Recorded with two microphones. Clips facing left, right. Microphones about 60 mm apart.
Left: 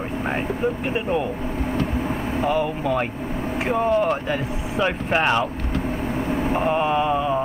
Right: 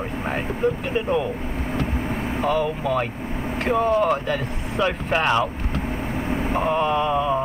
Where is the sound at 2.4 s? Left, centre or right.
Left.